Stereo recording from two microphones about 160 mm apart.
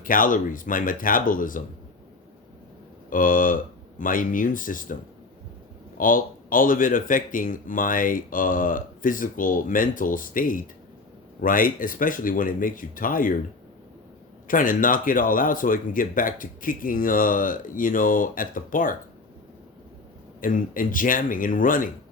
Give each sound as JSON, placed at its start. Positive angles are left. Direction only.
{"t": 0.0, "sound": "speech", "side_deg": 60}
{"t": 3.1, "sound": "speech", "side_deg": 60}
{"t": 6.0, "sound": "speech", "side_deg": 60}
{"t": 14.4, "sound": "speech", "side_deg": 60}
{"t": 20.4, "sound": "speech", "side_deg": 60}